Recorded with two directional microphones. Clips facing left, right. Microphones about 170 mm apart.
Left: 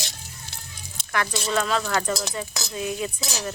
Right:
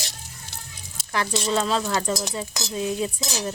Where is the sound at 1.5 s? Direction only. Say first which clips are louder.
Right 1 dB; 30° right (ahead or behind).